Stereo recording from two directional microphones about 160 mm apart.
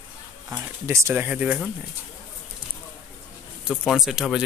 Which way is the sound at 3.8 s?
Centre (ahead or behind).